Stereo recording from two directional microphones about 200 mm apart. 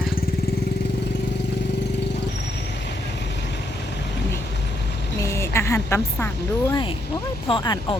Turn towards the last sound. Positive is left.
turn(degrees=20)  # may be behind; listen again after turning